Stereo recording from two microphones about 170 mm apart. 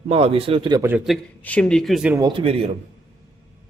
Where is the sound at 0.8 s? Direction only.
10° right (ahead or behind).